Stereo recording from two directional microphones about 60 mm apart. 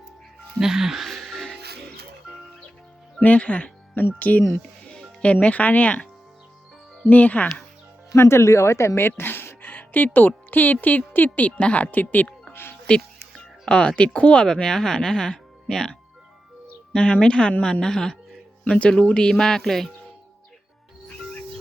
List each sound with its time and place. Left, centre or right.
0.6 s music: centre
3.2 s speech: left
8.1 s speech: left; by 18.2 s centre
18.8 s speech: left; by 19.9 s centre